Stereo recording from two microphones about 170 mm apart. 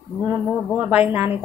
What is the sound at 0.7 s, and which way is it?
Speech, 10° right (ahead or behind).